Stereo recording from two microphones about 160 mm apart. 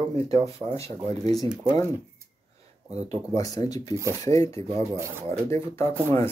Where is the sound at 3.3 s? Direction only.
20° left (ahead or behind).